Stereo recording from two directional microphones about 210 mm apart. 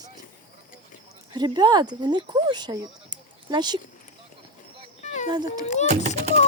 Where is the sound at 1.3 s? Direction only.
20° right (ahead or behind).